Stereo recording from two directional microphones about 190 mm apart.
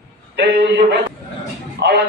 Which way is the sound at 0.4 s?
65° right (ahead or behind).